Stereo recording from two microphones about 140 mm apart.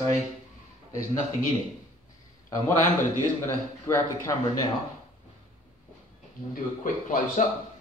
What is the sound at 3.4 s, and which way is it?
Speech, 20° left (ahead or behind).